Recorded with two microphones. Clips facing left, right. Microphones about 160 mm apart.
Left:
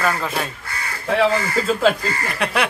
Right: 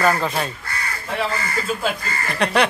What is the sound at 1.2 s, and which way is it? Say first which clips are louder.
Speech: left 6 dB; 90° left.